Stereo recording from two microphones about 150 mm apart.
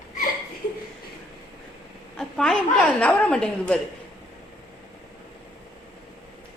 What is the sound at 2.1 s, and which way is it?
A woman's voice, 5° left (ahead or behind).